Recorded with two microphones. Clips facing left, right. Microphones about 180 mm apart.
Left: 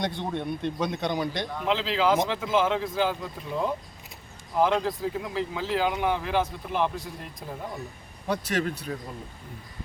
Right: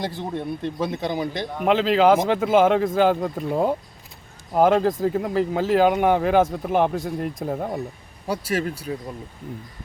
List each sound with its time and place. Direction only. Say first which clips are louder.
0.0 s speech: right 2 dB; 5° right (ahead or behind)
1.6 s a man's voice: right 8 dB; 55° right (ahead or behind)
8.3 s speech: right 3 dB; 5° right (ahead or behind)